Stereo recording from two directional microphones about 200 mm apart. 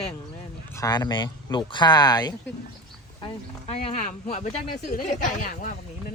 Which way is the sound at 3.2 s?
30° left (ahead or behind).